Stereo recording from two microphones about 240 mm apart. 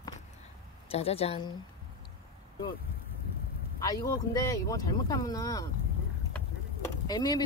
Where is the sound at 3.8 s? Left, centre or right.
Centre.